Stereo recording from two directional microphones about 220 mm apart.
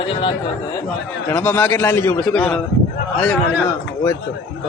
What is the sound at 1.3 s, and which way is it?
A man's voice, 5° left (ahead or behind).